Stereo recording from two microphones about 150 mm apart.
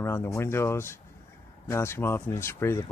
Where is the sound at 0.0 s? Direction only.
15° left (ahead or behind).